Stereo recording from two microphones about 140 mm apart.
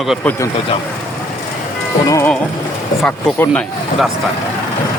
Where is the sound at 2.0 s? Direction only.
20° left (ahead or behind).